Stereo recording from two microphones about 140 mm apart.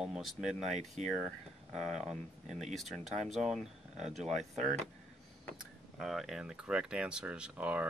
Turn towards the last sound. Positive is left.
turn(degrees=-10)  # may be behind; listen again after turning